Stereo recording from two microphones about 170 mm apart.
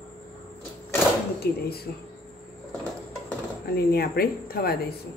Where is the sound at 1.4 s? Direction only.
65° left (ahead or behind).